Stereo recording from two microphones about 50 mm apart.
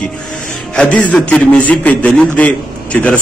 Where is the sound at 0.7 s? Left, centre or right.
Left.